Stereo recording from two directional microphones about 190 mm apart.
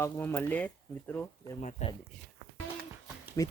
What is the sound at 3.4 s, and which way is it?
Speech, 15° left (ahead or behind).